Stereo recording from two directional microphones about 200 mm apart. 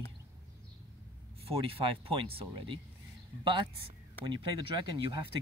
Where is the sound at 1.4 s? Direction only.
30° right (ahead or behind).